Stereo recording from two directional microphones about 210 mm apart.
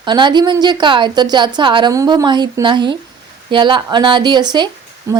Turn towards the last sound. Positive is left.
turn(degrees=-15)  # may be behind; listen again after turning